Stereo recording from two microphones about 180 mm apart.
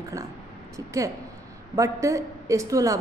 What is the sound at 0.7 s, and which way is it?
A woman's voice, 20° right (ahead or behind).